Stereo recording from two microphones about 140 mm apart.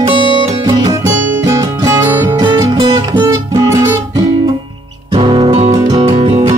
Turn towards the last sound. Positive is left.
turn(degrees=-45)  # may be behind; listen again after turning